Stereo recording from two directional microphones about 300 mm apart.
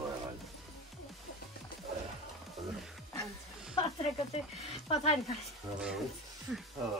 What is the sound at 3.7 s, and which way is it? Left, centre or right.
Speech, centre.